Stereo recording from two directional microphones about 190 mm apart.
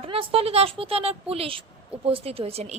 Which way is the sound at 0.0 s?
30° right (ahead or behind).